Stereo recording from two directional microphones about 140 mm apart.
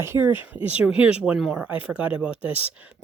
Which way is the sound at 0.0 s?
20° right (ahead or behind).